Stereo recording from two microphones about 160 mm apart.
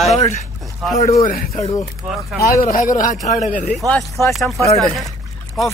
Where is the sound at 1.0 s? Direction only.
55° left (ahead or behind).